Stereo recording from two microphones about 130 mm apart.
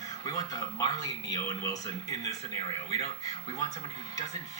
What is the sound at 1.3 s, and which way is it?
Speech, 30° left (ahead or behind).